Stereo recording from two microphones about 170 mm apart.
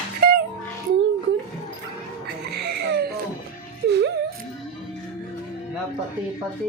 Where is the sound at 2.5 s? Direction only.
75° right (ahead or behind).